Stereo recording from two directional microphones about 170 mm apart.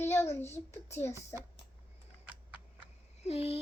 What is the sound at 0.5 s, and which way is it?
Speech, 15° left (ahead or behind).